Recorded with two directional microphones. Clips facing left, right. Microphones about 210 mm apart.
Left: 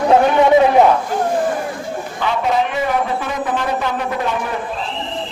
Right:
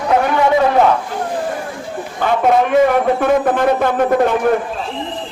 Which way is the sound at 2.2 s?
50° right (ahead or behind).